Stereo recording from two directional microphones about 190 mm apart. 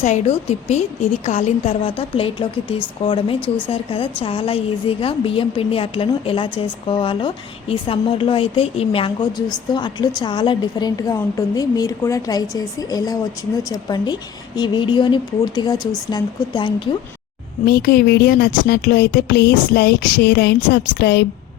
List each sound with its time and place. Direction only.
0.0 s a woman's voice: 40° left (ahead or behind)
17.7 s speech: 55° left (ahead or behind)